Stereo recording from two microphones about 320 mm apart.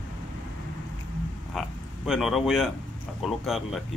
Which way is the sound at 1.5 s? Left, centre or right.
Centre.